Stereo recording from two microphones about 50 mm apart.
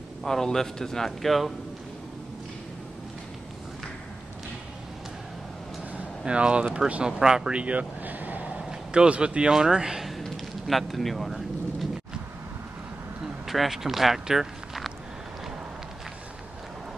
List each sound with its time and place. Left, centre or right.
0.2 s speech: centre
5.9 s speech: right; by 10.2 s centre
10.2 s a sound: centre
13.5 s speech: centre